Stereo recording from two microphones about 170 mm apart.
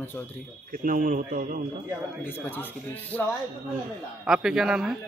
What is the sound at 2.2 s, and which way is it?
Speech, 15° left (ahead or behind).